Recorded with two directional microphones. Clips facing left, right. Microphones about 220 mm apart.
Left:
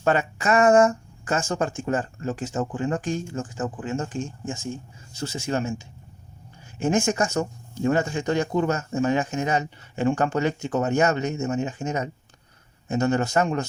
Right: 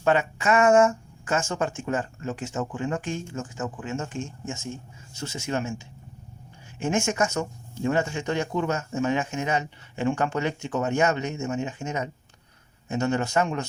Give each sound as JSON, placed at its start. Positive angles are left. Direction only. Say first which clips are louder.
{"t": 0.0, "sound": "speech", "louder": "even", "side_deg": 40}
{"t": 6.7, "sound": "speech", "louder": "left 3 dB", "side_deg": 35}